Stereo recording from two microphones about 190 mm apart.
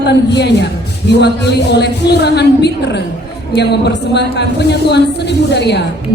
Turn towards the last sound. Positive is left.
turn(degrees=60)  # may be behind; listen again after turning